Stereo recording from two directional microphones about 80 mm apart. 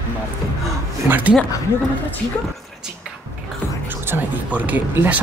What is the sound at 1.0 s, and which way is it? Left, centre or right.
Speech, right.